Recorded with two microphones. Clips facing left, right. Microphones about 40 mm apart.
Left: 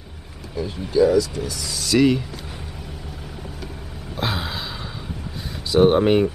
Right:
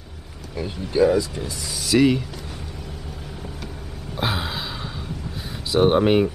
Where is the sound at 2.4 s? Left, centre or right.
Centre.